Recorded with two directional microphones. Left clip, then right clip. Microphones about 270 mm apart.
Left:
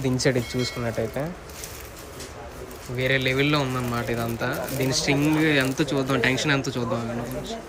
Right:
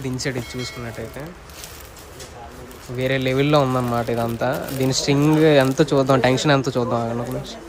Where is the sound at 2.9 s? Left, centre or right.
Centre.